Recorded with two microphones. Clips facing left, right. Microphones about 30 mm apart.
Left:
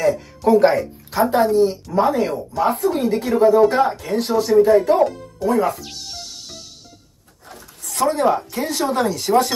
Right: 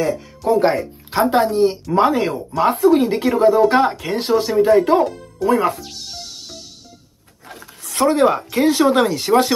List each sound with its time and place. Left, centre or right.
0.0 s speech: centre
1.1 s speech: right
7.4 s speech: right